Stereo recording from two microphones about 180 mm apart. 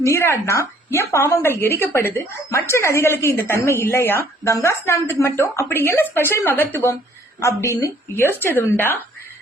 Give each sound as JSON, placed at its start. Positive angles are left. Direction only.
{"t": 0.0, "sound": "a woman's voice", "side_deg": 15}